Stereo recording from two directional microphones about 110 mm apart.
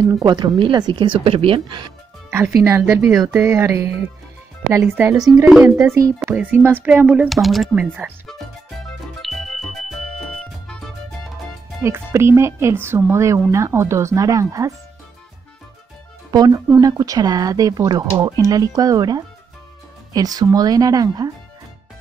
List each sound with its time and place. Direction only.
0.2 s speech: 45° right (ahead or behind)
2.3 s speech: 25° right (ahead or behind)
6.2 s speech: 15° right (ahead or behind)
7.2 s speech: centre (ahead or behind)
7.8 s speech: 15° right (ahead or behind)
8.3 s music: centre (ahead or behind)
11.8 s speech: 25° right (ahead or behind)
16.3 s speech: 40° right (ahead or behind)